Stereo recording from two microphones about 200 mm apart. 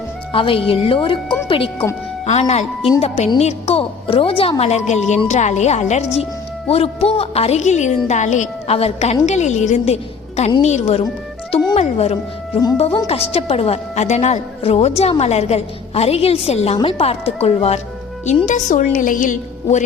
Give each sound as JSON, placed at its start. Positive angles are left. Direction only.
{"t": 0.3, "sound": "a woman's voice", "side_deg": 25}
{"t": 11.5, "sound": "music", "side_deg": 30}
{"t": 12.7, "sound": "a woman's voice", "side_deg": 30}